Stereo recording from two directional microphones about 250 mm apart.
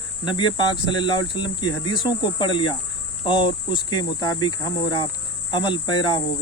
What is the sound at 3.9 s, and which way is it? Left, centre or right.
Speech, centre.